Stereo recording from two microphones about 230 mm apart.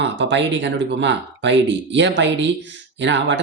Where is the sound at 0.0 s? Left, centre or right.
Right.